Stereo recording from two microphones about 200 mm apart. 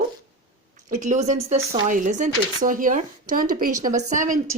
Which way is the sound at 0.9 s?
40° right (ahead or behind).